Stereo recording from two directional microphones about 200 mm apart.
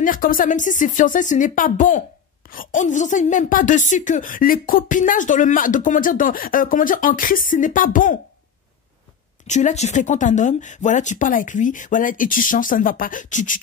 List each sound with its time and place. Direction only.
0.0 s speech: 45° left (ahead or behind)
9.5 s speech: 35° left (ahead or behind)